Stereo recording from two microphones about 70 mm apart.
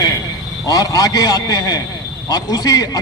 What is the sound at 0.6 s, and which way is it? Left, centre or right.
A man's voice, left.